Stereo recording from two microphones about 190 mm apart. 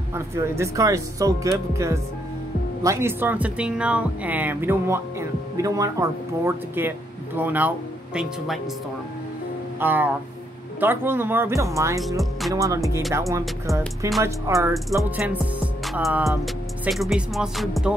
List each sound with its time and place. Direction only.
0.1 s speech: 15° right (ahead or behind)
9.8 s speech: 10° right (ahead or behind)
12.2 s speech: centre (ahead or behind)
12.5 s speech: 15° right (ahead or behind)